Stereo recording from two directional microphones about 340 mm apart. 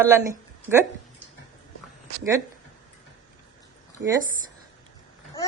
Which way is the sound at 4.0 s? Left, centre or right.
Right.